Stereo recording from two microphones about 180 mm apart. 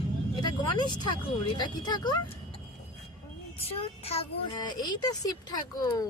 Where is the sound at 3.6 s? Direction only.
35° left (ahead or behind).